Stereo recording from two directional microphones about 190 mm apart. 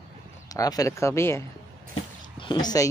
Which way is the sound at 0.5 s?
20° left (ahead or behind).